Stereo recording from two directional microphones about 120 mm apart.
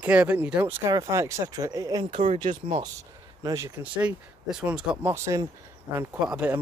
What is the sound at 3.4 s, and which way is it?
Speech, 30° right (ahead or behind).